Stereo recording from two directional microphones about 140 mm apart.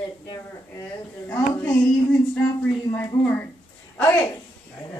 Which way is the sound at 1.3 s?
15° left (ahead or behind).